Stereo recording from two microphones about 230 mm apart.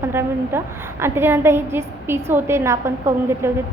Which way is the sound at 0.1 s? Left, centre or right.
Centre.